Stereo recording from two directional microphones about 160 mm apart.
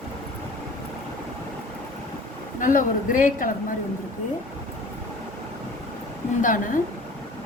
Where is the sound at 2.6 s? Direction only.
55° left (ahead or behind).